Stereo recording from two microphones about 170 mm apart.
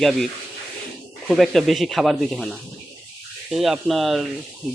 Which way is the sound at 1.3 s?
Centre (ahead or behind).